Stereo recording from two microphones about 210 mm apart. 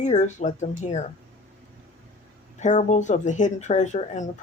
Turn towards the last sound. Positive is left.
turn(degrees=35)  # may be behind; listen again after turning